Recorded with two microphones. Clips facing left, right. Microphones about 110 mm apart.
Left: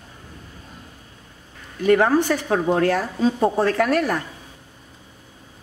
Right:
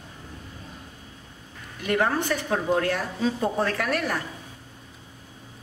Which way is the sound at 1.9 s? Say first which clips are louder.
Left 7 dB; 35° left (ahead or behind).